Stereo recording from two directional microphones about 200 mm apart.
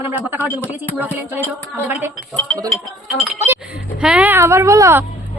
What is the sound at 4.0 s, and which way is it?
Speech, 5° right (ahead or behind).